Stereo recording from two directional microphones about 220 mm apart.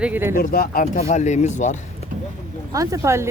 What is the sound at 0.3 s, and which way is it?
Speech, 45° left (ahead or behind).